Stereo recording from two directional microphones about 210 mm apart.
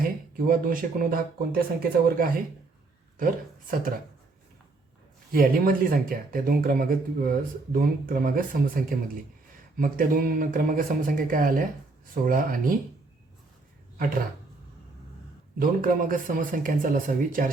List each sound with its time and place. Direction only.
0.0 s speech: 45° right (ahead or behind)
5.3 s speech: 45° right (ahead or behind)
15.5 s speech: 40° right (ahead or behind)